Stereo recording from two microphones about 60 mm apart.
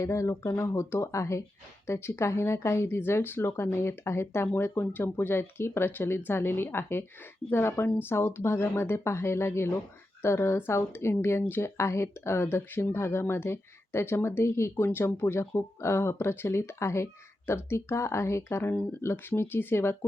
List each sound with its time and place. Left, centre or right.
0.0 s speech: left
8.0 s speech: left
18.7 s speech: left
19.0 s speech: left